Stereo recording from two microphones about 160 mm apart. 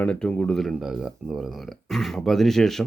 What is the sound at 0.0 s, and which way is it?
Speech, 5° left (ahead or behind).